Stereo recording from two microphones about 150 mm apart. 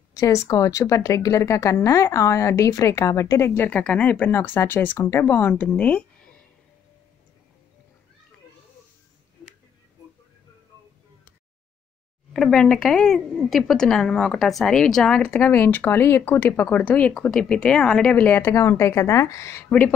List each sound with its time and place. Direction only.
0.1 s a sound: 20° left (ahead or behind)
0.5 s speech: 20° left (ahead or behind)
12.3 s speech: 5° left (ahead or behind); by 19.6 s 20° left (ahead or behind)